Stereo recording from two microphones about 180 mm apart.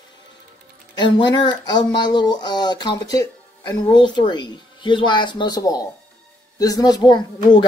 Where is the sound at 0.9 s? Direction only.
25° left (ahead or behind).